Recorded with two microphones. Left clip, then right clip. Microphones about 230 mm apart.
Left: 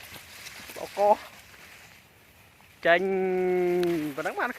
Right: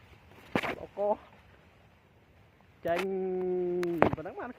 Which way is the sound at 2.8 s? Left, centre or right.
Left.